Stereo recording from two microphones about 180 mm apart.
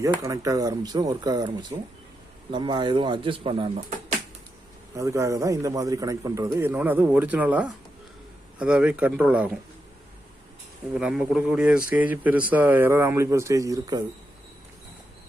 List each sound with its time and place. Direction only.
0.0 s speech: 20° right (ahead or behind)
2.5 s speech: 25° right (ahead or behind)
4.9 s a man's voice: 15° right (ahead or behind)
10.9 s a man's voice: 5° right (ahead or behind)